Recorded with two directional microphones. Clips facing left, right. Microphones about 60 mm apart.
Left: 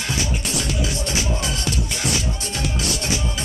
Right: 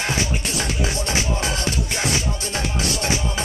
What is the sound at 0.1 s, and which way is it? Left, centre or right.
Music, right.